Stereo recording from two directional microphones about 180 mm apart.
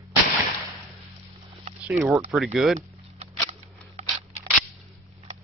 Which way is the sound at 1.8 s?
10° right (ahead or behind).